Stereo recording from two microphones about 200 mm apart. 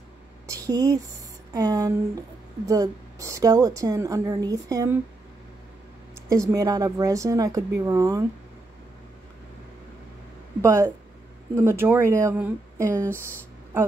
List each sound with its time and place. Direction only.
0.5 s a woman's voice: 15° right (ahead or behind)
6.2 s a woman's voice: 15° right (ahead or behind)
10.6 s a woman's voice: 15° right (ahead or behind)